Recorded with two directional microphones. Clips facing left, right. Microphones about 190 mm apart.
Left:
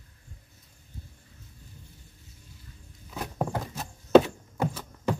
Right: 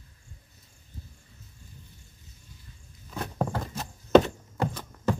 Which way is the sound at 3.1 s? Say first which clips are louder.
Even; 10° left (ahead or behind).